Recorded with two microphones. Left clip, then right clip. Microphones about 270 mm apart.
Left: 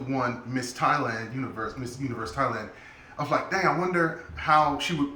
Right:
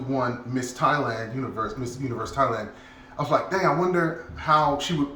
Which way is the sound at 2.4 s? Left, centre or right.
Centre.